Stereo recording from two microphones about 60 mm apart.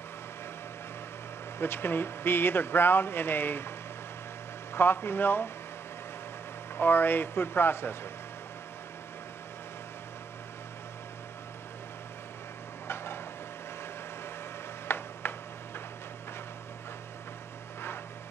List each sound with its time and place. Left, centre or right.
1.6 s speech: left
4.7 s speech: left
6.8 s speech: left
12.8 s stir: left
14.9 s a sound: left